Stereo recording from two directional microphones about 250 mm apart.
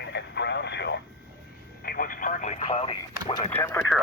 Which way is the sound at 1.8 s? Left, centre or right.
Left.